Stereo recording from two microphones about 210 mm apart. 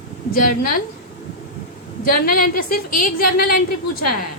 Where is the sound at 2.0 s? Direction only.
45° left (ahead or behind).